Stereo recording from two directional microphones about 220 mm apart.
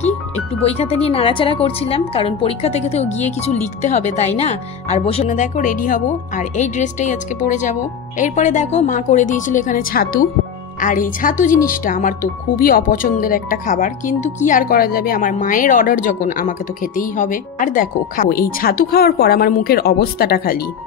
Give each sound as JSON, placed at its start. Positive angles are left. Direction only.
{"t": 0.6, "sound": "a woman's voice", "side_deg": 25}